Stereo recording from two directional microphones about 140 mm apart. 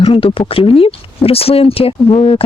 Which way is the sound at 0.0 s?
40° left (ahead or behind).